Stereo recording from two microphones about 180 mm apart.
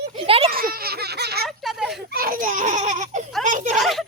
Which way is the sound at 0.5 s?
55° right (ahead or behind).